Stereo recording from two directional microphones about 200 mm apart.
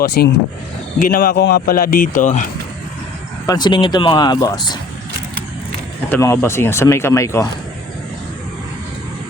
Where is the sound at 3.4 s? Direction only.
20° left (ahead or behind).